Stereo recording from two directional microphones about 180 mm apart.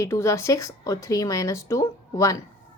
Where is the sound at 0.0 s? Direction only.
15° left (ahead or behind).